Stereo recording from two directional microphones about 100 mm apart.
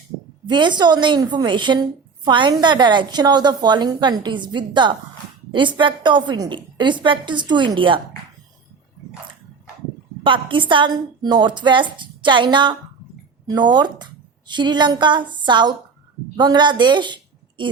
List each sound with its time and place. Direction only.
0.4 s a woman's voice: 50° right (ahead or behind)
10.2 s a woman's voice: 55° right (ahead or behind)